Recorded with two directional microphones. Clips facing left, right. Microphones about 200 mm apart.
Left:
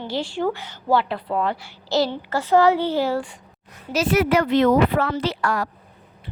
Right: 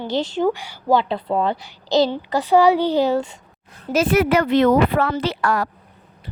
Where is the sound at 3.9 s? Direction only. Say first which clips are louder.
Right 2 dB; 55° right (ahead or behind).